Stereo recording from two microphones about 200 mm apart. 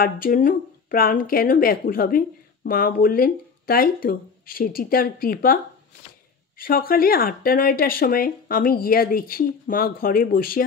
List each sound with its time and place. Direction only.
0.0 s speech: 45° left (ahead or behind)
6.6 s speech: 45° left (ahead or behind)